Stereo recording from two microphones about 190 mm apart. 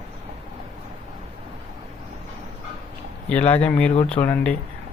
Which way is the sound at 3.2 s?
10° left (ahead or behind).